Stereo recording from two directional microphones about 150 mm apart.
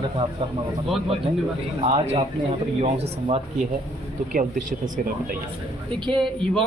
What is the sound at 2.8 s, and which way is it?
Speech, 40° right (ahead or behind).